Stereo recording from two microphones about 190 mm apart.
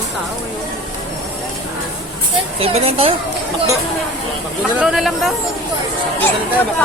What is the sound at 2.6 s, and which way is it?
Speech, 30° right (ahead or behind).